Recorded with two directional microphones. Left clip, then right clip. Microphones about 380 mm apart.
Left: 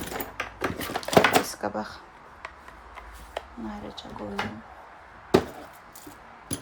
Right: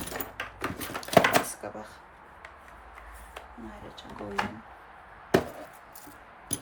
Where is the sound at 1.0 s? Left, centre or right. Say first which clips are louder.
Left 2 dB; centre.